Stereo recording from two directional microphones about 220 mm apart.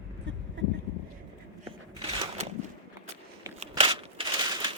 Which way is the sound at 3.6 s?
25° right (ahead or behind).